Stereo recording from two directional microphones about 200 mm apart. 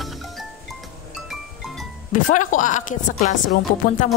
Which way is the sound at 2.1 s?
40° left (ahead or behind).